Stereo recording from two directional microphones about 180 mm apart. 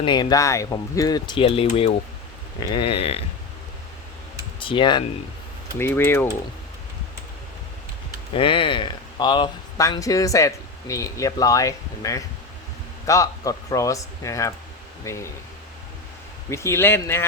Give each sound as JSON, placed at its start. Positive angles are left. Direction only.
{"t": 0.0, "sound": "speech", "side_deg": 25}
{"t": 4.6, "sound": "speech", "side_deg": 25}
{"t": 5.8, "sound": "speech", "side_deg": 10}
{"t": 8.4, "sound": "speech", "side_deg": 30}
{"t": 16.5, "sound": "speech", "side_deg": 15}